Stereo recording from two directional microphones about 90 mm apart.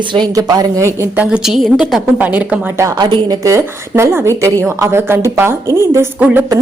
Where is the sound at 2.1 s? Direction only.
20° right (ahead or behind).